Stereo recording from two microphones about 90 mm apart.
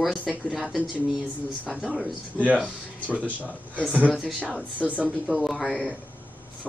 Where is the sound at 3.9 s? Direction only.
15° right (ahead or behind); by 5.8 s centre (ahead or behind).